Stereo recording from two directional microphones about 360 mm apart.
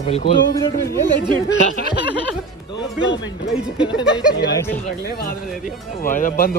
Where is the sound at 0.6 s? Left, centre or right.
Centre.